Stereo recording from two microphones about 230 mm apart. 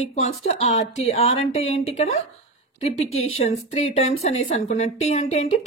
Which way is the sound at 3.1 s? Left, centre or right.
Left.